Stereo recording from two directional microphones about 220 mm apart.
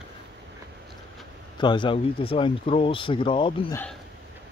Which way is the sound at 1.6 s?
20° left (ahead or behind).